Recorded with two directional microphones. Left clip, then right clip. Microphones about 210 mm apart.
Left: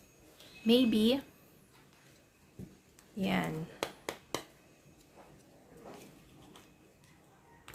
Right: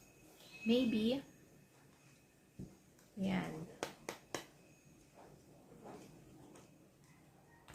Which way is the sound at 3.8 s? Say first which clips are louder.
Left 6 dB; 30° left (ahead or behind).